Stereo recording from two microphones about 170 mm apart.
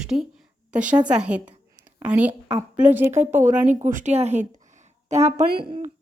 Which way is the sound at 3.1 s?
45° right (ahead or behind).